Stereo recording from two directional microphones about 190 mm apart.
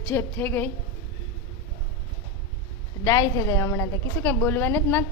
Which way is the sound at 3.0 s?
15° left (ahead or behind).